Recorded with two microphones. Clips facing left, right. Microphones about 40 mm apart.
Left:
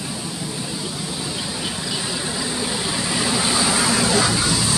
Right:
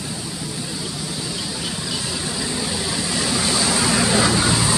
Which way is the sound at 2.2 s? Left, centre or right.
Centre.